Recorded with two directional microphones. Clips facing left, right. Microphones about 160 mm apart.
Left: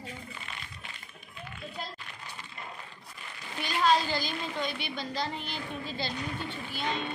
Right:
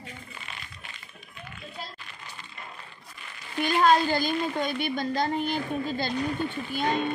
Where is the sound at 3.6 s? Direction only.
50° right (ahead or behind).